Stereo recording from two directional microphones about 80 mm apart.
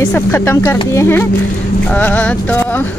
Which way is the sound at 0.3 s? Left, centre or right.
Left.